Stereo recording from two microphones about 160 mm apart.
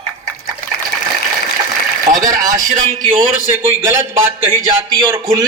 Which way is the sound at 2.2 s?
20° right (ahead or behind).